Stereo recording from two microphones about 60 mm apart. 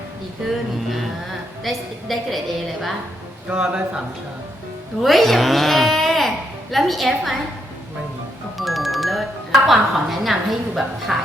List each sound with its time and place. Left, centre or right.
1.6 s a woman's voice: centre
3.5 s a man's voice: centre
5.0 s speech: centre
8.5 s speech: centre